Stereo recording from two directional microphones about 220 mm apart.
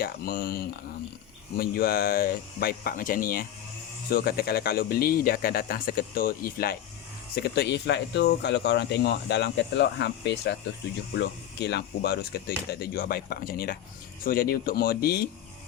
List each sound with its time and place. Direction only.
0.0 s speech: 40° left (ahead or behind)